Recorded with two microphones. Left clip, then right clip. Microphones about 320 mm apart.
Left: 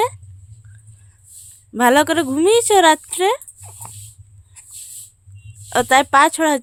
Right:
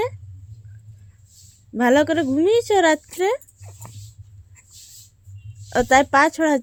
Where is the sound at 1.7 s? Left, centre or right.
Centre.